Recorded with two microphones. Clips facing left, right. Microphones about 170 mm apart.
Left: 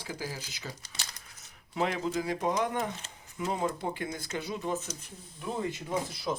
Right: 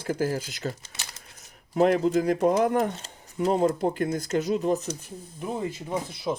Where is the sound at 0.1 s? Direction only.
50° right (ahead or behind).